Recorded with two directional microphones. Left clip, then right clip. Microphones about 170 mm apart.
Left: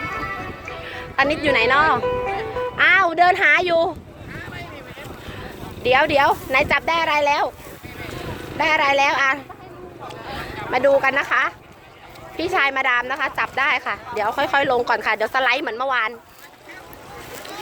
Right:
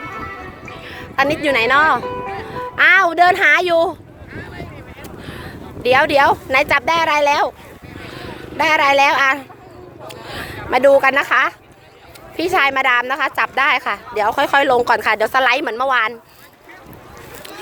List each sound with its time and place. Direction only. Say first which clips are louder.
0.0 s music: left 2 dB; centre (ahead or behind)
0.9 s speech: right 2 dB; 45° right (ahead or behind)
2.0 s music: left 2 dB; 15° left (ahead or behind)
2.7 s speech: right 4 dB; 50° right (ahead or behind)
5.3 s speech: right 2 dB; 50° right (ahead or behind)
8.5 s speech: right 4 dB; 55° right (ahead or behind)
10.1 s a sound: right 2 dB; 65° right (ahead or behind)
10.7 s speech: right 5 dB; 60° right (ahead or behind)